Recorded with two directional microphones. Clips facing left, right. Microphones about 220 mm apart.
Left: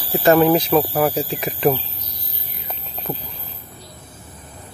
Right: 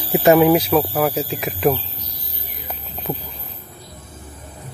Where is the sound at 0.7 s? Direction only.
5° left (ahead or behind).